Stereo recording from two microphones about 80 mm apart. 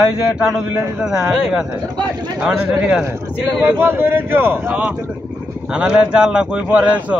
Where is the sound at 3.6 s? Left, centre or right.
Right.